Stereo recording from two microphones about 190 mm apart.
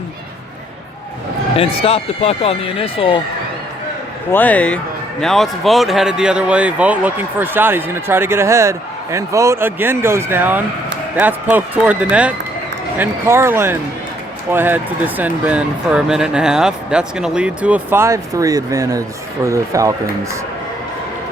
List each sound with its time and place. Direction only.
1.5 s speech: 30° left (ahead or behind)
4.3 s speech: 10° left (ahead or behind); by 19.9 s 15° right (ahead or behind)